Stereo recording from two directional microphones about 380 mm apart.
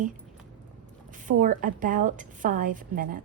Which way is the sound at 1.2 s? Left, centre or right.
Right.